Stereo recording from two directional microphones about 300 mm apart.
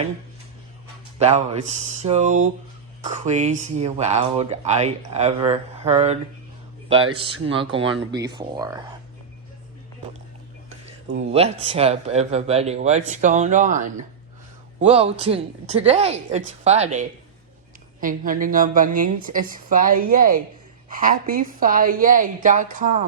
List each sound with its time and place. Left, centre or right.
1.2 s speech: right
7.4 s speech: centre
11.2 s speech: right
19.0 s a woman's voice: right
19.3 s speech: right